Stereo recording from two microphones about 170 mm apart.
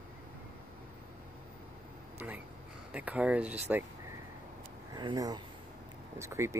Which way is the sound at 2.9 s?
10° right (ahead or behind).